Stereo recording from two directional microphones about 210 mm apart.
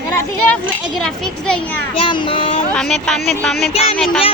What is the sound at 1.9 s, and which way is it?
Speech, 25° left (ahead or behind).